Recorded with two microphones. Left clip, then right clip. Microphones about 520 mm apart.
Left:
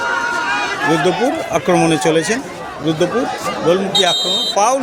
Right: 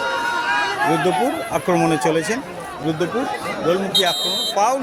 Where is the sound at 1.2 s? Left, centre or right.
Right.